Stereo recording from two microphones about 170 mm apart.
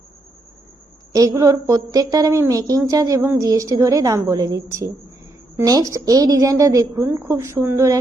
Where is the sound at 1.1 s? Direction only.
20° right (ahead or behind).